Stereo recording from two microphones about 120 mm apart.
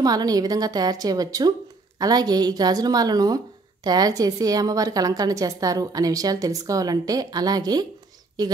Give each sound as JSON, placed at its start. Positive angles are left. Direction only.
{"t": 0.0, "sound": "a woman's voice", "side_deg": -30}